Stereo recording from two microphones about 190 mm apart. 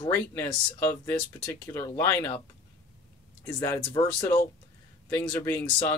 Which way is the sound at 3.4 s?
15° left (ahead or behind).